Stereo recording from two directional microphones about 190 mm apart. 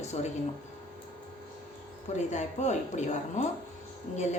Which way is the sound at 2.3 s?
40° left (ahead or behind).